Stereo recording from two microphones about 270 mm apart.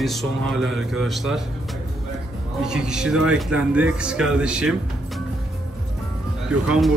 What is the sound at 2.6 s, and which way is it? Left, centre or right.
Speech, centre.